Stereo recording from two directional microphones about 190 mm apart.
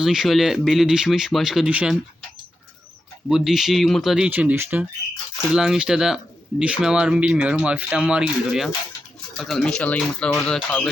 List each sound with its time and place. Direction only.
0.0 s speech: centre (ahead or behind)
3.2 s speech: centre (ahead or behind)